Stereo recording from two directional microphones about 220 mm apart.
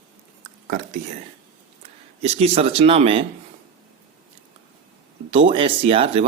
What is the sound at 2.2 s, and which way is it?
Speech, 25° right (ahead or behind).